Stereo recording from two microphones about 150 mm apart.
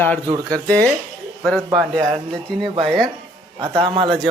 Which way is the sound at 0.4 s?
10° left (ahead or behind).